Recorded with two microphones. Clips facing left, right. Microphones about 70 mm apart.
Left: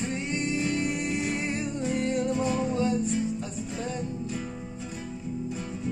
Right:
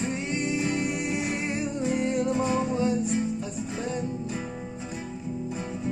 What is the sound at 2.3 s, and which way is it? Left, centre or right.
Music, right.